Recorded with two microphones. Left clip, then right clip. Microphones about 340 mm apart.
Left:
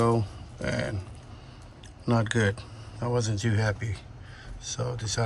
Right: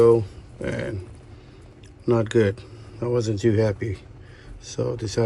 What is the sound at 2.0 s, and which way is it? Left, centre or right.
Speech, centre.